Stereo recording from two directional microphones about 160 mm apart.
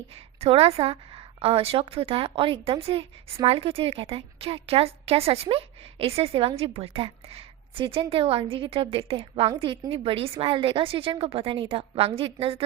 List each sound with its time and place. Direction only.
0.3 s a woman's voice: 40° right (ahead or behind)